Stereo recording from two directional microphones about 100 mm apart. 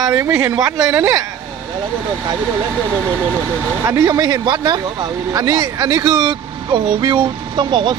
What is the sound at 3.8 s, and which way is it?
Speech, 30° right (ahead or behind).